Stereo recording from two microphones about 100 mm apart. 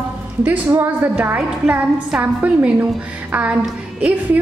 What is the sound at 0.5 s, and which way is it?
A woman's voice, 20° right (ahead or behind).